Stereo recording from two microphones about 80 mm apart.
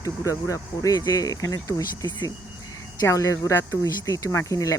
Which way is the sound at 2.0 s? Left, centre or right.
Left.